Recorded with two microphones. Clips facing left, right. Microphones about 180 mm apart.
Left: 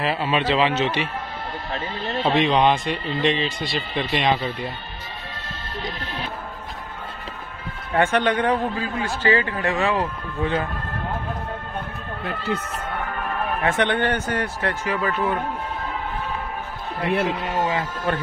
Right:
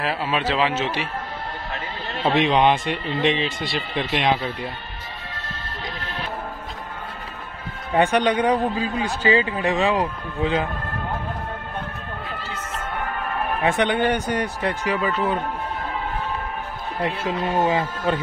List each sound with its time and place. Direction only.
0.0 s a man's voice: centre (ahead or behind)
2.2 s a man's voice: 5° right (ahead or behind)
2.8 s speech: 60° right (ahead or behind)
3.6 s a man's voice: 5° right (ahead or behind)
7.9 s a man's voice: 15° right (ahead or behind)
13.6 s a man's voice: 15° right (ahead or behind)
17.5 s speech: 25° right (ahead or behind)